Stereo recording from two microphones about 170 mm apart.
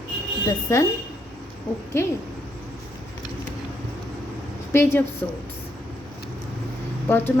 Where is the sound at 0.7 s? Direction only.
15° left (ahead or behind).